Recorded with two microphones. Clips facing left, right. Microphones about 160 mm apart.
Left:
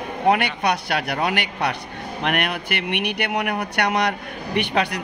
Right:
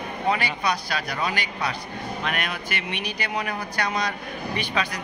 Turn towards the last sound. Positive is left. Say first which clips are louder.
# left 5 dB
turn(degrees=65)  # may be behind; listen again after turning